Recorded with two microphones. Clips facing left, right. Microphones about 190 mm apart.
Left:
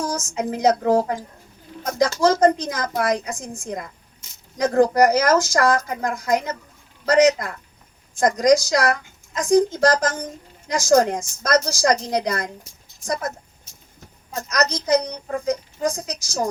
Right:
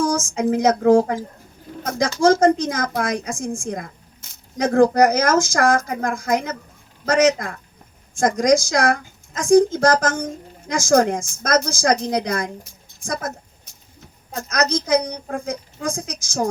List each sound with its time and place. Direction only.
0.2 s a woman's voice: 50° right (ahead or behind)
14.4 s a woman's voice: 50° right (ahead or behind)